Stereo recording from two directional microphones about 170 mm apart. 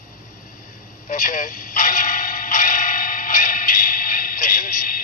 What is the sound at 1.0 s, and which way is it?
Speech, 50° left (ahead or behind).